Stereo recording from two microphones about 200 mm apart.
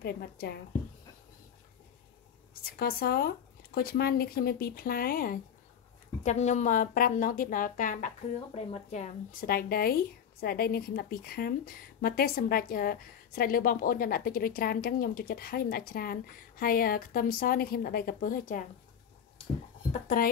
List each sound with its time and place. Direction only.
0.0 s speech: 50° left (ahead or behind)
2.6 s speech: 50° left (ahead or behind)
6.2 s a woman's voice: 35° left (ahead or behind)
19.9 s a woman's voice: 40° left (ahead or behind)